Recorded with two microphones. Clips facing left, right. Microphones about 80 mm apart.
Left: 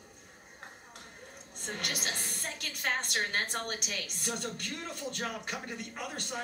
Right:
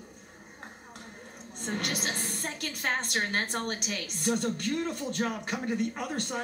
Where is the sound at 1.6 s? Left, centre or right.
Right.